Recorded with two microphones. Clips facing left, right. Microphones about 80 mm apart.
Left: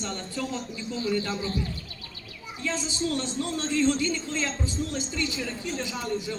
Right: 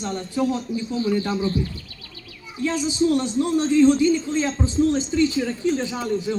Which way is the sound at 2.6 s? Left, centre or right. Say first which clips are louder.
Right 9 dB; centre.